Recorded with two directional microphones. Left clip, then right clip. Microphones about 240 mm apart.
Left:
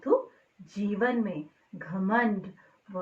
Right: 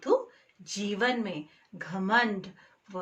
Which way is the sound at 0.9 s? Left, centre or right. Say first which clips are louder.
Even; right.